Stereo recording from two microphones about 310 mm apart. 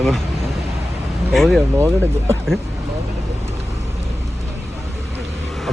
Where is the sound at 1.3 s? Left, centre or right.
Centre.